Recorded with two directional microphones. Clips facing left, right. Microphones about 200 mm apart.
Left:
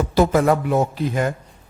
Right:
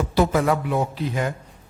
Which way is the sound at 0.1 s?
45° left (ahead or behind).